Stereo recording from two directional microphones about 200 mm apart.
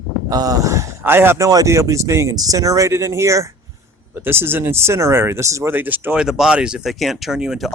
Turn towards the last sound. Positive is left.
turn(degrees=0)  # may be behind; listen again after turning